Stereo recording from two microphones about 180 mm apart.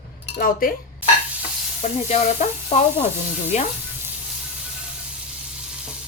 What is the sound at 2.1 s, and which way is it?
Speech, 35° left (ahead or behind).